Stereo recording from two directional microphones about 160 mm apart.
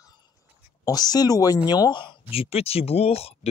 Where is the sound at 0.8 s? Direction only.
25° left (ahead or behind).